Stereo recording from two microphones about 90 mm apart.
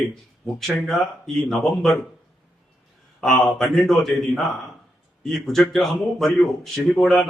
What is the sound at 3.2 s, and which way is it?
A man's voice, 5° left (ahead or behind).